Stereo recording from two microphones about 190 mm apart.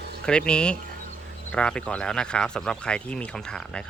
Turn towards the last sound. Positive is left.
turn(degrees=5)  # may be behind; listen again after turning